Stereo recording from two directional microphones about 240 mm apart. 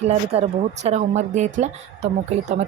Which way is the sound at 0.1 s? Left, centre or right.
Right.